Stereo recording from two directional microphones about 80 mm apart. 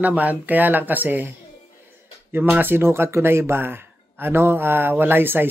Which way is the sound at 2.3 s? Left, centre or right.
Right.